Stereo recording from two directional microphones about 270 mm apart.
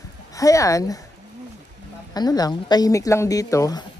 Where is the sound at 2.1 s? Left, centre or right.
Centre.